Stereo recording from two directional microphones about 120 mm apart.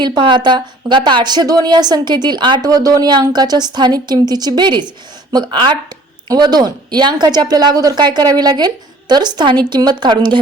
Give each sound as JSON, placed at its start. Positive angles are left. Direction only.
{"t": 0.0, "sound": "a woman's voice", "side_deg": -40}